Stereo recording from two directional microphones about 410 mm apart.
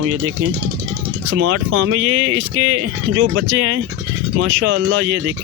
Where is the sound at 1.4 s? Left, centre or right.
Right.